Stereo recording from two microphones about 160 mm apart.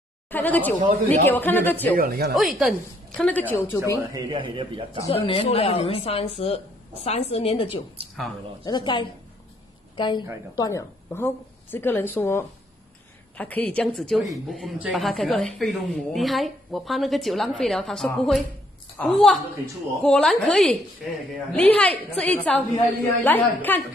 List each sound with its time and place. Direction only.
0.3 s a woman's voice: 10° left (ahead or behind)
2.0 s speech: 70° right (ahead or behind)
2.3 s a woman's voice: centre (ahead or behind); by 3.8 s 20° left (ahead or behind)
4.1 s a man's voice: 30° right (ahead or behind)
5.0 s a woman's voice: 35° left (ahead or behind)
11.1 s a woman's voice: 15° left (ahead or behind)